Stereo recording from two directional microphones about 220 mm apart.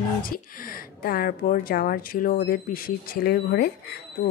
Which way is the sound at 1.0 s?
40° left (ahead or behind).